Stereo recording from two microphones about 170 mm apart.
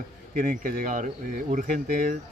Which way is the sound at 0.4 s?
50° right (ahead or behind).